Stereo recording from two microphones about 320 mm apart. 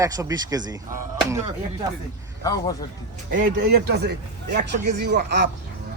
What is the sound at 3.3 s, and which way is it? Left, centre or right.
A man's voice, right.